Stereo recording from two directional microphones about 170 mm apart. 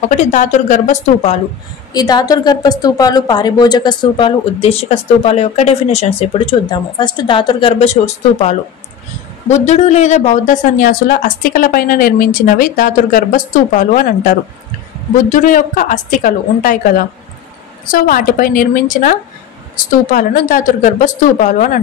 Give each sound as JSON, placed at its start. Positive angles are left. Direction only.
{"t": 0.1, "sound": "a woman's voice", "side_deg": 45}
{"t": 2.0, "sound": "a woman's voice", "side_deg": 25}